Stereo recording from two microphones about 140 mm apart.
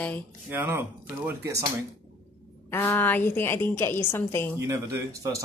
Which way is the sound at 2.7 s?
15° left (ahead or behind).